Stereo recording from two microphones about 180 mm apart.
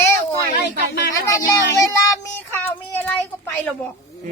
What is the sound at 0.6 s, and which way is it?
Speech, 65° left (ahead or behind).